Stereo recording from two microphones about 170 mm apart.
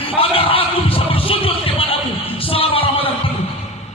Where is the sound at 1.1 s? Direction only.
35° left (ahead or behind).